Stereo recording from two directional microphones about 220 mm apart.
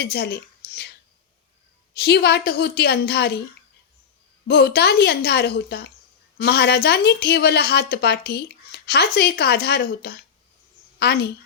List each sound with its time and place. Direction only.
0.0 s speech: 45° left (ahead or behind)
1.9 s speech: 50° left (ahead or behind)
4.4 s speech: 45° left (ahead or behind)